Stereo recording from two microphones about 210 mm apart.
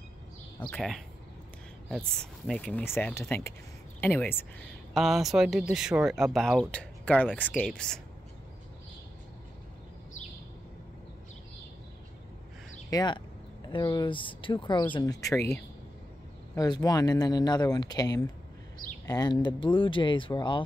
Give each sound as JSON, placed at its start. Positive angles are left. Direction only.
{"t": 0.7, "sound": "speech", "side_deg": 5}
{"t": 12.9, "sound": "speech", "side_deg": 20}